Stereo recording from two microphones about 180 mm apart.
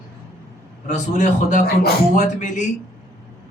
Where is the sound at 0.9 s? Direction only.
40° left (ahead or behind).